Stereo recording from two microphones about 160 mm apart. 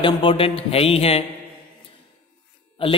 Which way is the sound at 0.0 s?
30° left (ahead or behind).